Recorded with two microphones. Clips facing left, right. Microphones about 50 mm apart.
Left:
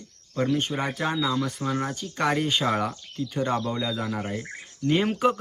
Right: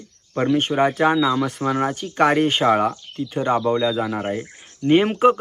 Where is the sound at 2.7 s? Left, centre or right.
Right.